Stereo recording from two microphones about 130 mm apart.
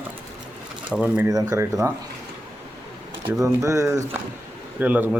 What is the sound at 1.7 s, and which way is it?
Speech, 30° right (ahead or behind).